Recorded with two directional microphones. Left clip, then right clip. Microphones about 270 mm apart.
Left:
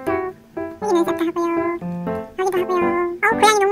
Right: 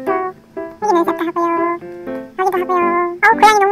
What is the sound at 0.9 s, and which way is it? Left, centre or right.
A child's voice, centre.